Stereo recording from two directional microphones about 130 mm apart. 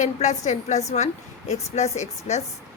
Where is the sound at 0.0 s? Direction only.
65° left (ahead or behind).